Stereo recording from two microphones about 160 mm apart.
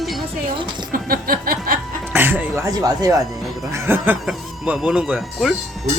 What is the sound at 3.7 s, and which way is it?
Speech, 15° right (ahead or behind).